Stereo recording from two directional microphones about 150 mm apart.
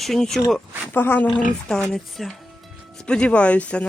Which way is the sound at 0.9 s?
15° left (ahead or behind).